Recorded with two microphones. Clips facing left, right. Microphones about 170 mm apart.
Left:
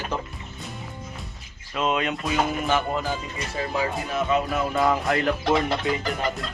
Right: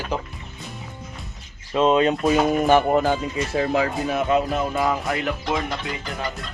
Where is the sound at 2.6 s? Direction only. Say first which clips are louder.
Right 7 dB; 50° right (ahead or behind).